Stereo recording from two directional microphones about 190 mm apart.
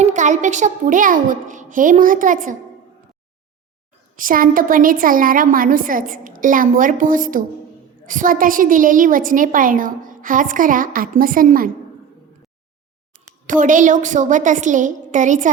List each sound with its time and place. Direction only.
0.0 s a woman's voice: 40° right (ahead or behind)
4.2 s a woman's voice: 45° right (ahead or behind)
13.5 s a woman's voice: 45° right (ahead or behind)